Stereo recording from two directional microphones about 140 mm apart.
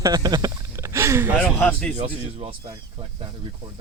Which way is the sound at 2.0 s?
40° right (ahead or behind).